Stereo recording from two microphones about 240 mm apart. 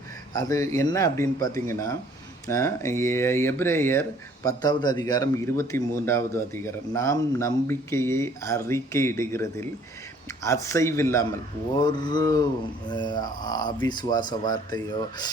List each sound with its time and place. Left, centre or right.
0.3 s a man's voice: centre